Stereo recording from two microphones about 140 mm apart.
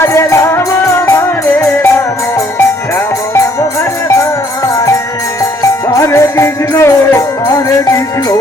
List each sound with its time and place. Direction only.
0.0 s music: 20° left (ahead or behind)
4.1 s music: 20° left (ahead or behind)